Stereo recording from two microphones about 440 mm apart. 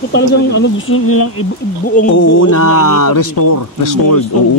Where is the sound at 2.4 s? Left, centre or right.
Left.